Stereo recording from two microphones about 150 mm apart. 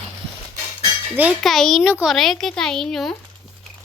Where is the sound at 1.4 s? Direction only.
Centre (ahead or behind).